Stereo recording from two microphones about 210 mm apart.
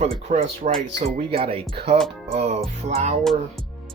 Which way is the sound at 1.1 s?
25° right (ahead or behind).